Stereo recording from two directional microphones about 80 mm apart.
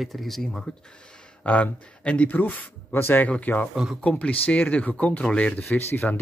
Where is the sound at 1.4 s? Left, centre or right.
Centre.